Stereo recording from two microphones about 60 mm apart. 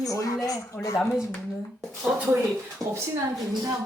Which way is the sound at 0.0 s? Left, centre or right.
Left.